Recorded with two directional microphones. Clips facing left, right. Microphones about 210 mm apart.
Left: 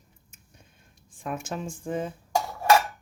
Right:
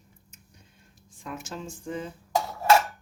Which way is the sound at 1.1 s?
50° left (ahead or behind).